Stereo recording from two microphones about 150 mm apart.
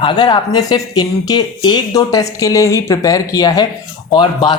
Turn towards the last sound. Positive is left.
turn(degrees=30)  # may be behind; listen again after turning